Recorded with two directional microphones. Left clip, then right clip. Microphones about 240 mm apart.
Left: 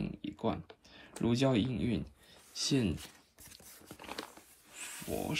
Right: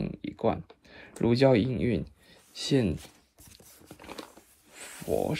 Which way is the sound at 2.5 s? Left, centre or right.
Centre.